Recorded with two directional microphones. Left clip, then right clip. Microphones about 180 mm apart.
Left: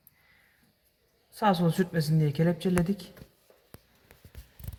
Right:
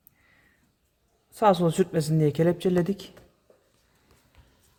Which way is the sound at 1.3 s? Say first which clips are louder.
Right 5 dB; 80° right.